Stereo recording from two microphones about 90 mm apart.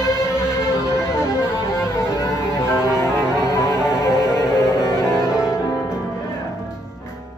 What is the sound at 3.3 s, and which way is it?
Music, 35° left (ahead or behind).